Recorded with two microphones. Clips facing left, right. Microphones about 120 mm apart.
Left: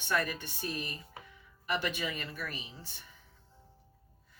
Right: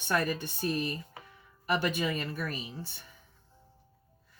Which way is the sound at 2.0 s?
45° right (ahead or behind).